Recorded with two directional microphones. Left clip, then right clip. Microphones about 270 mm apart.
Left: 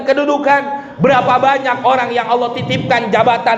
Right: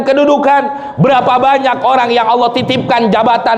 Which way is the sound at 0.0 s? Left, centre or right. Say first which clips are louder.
Right 4 dB; right.